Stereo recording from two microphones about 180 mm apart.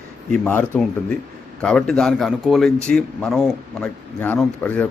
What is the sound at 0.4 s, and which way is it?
Speech, 10° left (ahead or behind).